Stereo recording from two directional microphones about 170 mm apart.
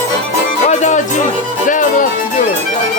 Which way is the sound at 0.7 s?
45° left (ahead or behind).